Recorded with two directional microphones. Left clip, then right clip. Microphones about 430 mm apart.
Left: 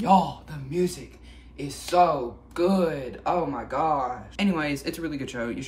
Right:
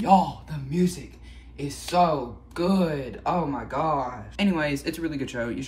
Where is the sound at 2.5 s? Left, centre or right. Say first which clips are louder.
Left 2 dB; centre.